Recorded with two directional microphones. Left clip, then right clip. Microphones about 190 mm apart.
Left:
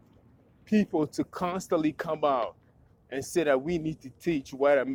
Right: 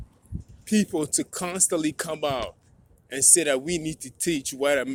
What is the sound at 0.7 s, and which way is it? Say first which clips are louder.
Speech: right 2 dB; 35° right (ahead or behind).